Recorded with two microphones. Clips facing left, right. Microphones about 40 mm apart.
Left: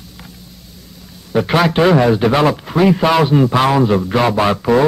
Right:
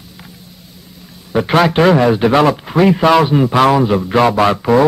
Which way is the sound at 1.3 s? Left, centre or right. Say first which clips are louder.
Right 2 dB; centre.